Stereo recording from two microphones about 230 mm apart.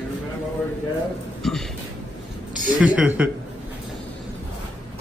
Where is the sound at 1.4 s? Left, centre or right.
Centre.